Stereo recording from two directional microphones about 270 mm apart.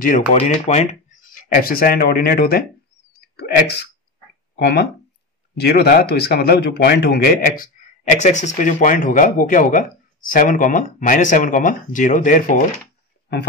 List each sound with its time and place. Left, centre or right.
0.3 s speech: left
3.1 s a sound: left
4.6 s speech: left